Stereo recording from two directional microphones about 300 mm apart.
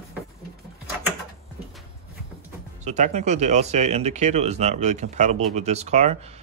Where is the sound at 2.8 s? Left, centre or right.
Right.